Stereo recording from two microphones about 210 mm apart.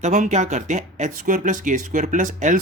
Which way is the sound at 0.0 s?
35° right (ahead or behind).